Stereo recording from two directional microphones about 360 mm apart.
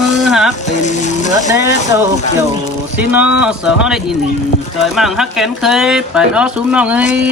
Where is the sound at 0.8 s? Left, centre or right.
Centre.